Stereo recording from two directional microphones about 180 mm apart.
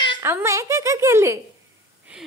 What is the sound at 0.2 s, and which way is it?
Speech, 15° right (ahead or behind).